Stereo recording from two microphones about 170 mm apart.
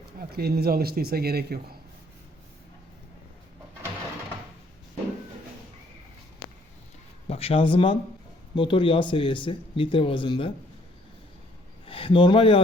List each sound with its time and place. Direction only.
0.2 s speech: 65° right (ahead or behind)
7.3 s speech: 35° left (ahead or behind)
11.9 s speech: 30° left (ahead or behind)